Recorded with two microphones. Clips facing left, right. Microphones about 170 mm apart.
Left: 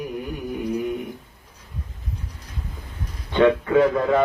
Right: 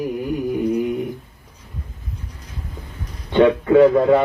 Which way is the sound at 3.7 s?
35° right (ahead or behind).